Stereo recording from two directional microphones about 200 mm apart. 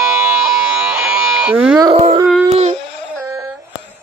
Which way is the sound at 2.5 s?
30° right (ahead or behind).